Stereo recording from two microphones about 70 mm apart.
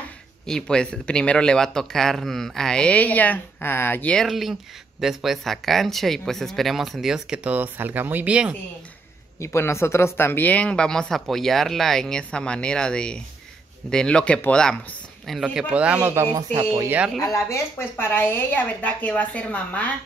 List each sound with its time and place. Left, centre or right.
0.5 s speech: centre; by 4.1 s left
4.3 s speech: centre; by 8.3 s right
8.3 s speech: centre
9.4 s speech: left; by 15.4 s centre
15.7 s speech: centre
16.3 s speech: right
17.3 s speech: left; by 19.9 s centre